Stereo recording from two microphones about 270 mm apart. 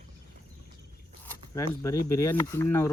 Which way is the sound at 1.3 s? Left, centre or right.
Centre.